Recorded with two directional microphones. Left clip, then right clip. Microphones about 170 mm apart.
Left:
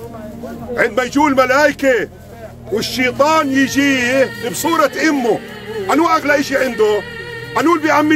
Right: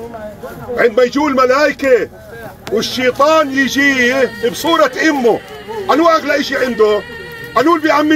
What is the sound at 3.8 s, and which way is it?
Speech, 45° left (ahead or behind).